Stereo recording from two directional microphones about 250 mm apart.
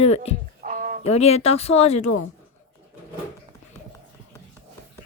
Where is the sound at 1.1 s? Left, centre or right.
Left.